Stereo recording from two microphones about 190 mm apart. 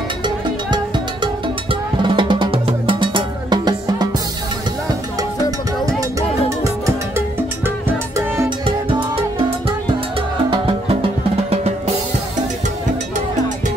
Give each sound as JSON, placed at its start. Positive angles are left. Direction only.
{"t": 0.2, "sound": "music", "side_deg": -25}
{"t": 5.9, "sound": "music", "side_deg": -15}
{"t": 8.6, "sound": "music", "side_deg": -30}
{"t": 10.5, "sound": "music", "side_deg": -30}